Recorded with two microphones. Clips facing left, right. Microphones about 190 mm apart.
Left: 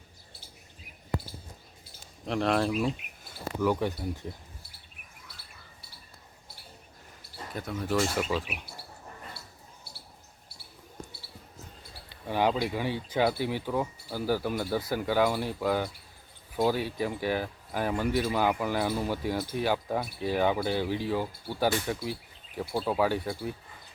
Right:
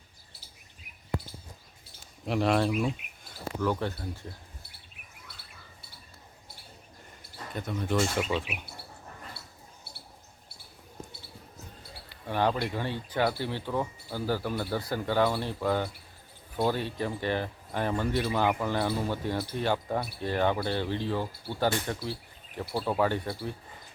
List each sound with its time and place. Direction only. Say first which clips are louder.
2.2 s speech: right 1 dB; 5° right (ahead or behind)
3.6 s speech: left 3 dB; 10° left (ahead or behind)
7.5 s speech: even; centre (ahead or behind)
12.2 s speech: left 1 dB; 10° left (ahead or behind)
22.6 s speech: even; 5° right (ahead or behind)